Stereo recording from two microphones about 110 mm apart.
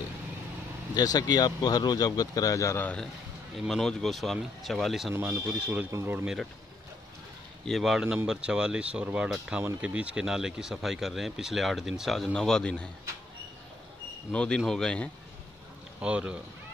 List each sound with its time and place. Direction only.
0.9 s speech: 35° left (ahead or behind)
2.8 s a man's voice: 10° left (ahead or behind)
5.2 s speech: 15° right (ahead or behind)
7.6 s a man's voice: centre (ahead or behind)
14.3 s a man's voice: 10° left (ahead or behind)
16.0 s speech: 10° right (ahead or behind)